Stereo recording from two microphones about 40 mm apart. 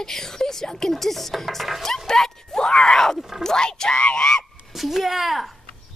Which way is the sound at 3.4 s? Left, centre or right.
Centre.